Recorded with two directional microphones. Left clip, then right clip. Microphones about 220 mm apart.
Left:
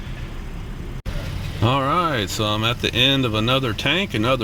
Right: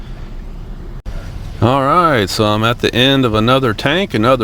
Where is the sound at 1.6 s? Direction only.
20° right (ahead or behind).